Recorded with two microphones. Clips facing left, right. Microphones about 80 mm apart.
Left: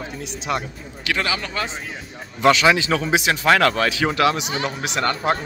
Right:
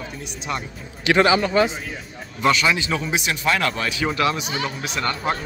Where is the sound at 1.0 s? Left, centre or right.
Right.